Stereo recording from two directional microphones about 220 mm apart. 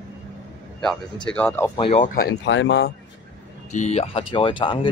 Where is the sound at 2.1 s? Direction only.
50° left (ahead or behind).